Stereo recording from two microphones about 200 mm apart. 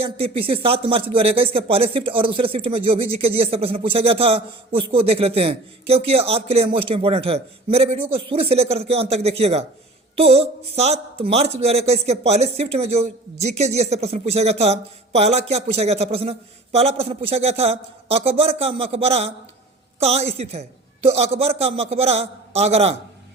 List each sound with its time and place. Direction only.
0.0 s speech: 30° right (ahead or behind)